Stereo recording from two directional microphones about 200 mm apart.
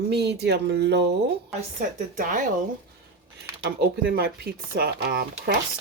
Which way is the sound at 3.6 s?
50° right (ahead or behind).